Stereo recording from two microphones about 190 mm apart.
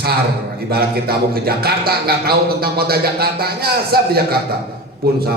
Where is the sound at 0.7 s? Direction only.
55° right (ahead or behind).